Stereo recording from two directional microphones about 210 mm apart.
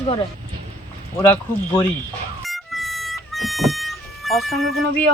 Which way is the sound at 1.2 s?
10° left (ahead or behind).